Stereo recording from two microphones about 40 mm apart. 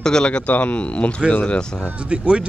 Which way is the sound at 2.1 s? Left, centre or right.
Right.